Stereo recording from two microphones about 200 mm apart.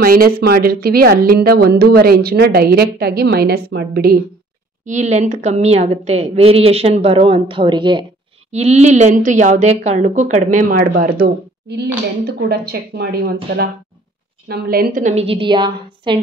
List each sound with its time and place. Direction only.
0.0 s a woman's voice: 45° right (ahead or behind)
4.8 s a woman's voice: 35° right (ahead or behind)